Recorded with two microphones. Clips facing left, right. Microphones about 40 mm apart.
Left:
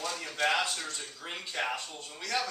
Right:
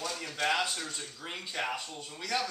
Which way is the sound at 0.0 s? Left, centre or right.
Centre.